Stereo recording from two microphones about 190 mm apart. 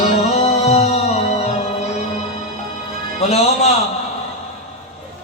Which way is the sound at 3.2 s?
35° left (ahead or behind).